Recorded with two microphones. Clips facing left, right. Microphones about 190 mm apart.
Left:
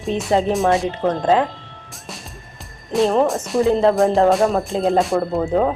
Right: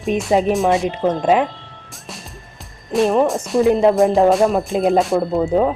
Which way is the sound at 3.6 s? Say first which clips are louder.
Right 2 dB; 15° right (ahead or behind).